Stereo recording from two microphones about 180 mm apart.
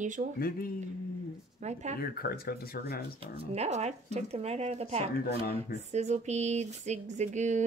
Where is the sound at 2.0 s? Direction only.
55° left (ahead or behind).